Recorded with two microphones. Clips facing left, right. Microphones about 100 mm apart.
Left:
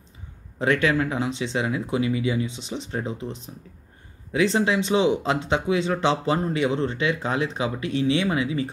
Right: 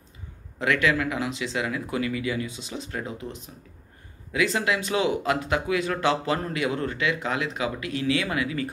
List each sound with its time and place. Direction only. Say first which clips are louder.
0.6 s speech: left 2 dB; 30° left (ahead or behind)